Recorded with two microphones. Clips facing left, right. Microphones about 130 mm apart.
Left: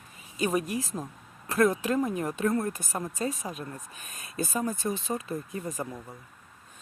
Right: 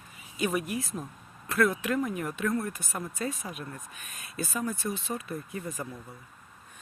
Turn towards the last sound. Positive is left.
turn(degrees=15)  # may be behind; listen again after turning